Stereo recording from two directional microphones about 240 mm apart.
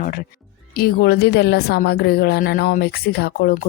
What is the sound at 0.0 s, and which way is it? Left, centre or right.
Speech, left.